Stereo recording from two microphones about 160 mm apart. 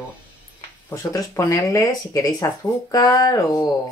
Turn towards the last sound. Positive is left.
turn(degrees=20)  # may be behind; listen again after turning